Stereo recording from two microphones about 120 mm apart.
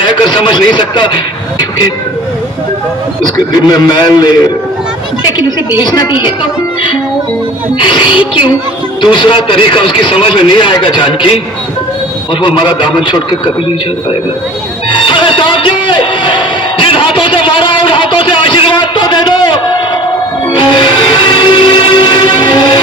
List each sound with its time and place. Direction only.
0.0 s a man's voice: 40° left (ahead or behind)
3.2 s a man's voice: 40° left (ahead or behind)
5.8 s a man's voice: 35° left (ahead or behind)
7.8 s a man's voice: 45° left (ahead or behind)
12.4 s a man's voice: 40° left (ahead or behind)
14.8 s music: 45° left (ahead or behind)
16.8 s a sound: 45° left (ahead or behind)
20.6 s train: 40° left (ahead or behind)